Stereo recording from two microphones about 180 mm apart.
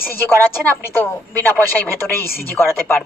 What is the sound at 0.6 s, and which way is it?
Speech, 10° left (ahead or behind).